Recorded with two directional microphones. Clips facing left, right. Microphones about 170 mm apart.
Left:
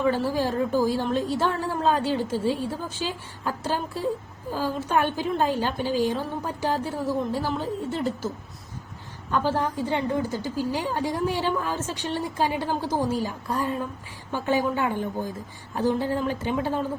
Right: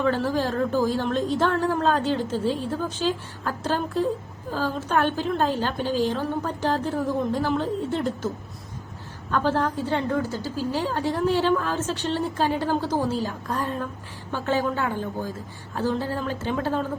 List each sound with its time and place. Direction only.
0.0 s a woman's voice: 10° left (ahead or behind)
9.3 s a woman's voice: 10° left (ahead or behind)